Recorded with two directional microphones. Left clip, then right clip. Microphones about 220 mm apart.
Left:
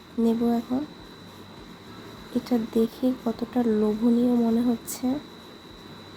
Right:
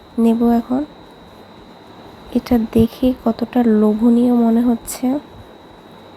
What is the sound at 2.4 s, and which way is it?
Speech, 30° right (ahead or behind).